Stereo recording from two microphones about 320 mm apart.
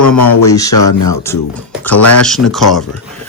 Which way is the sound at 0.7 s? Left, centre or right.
Left.